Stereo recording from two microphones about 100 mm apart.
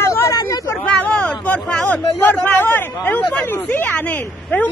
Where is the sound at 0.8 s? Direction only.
15° left (ahead or behind).